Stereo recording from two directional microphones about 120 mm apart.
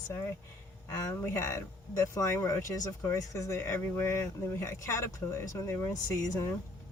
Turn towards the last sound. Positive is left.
turn(degrees=25)  # may be behind; listen again after turning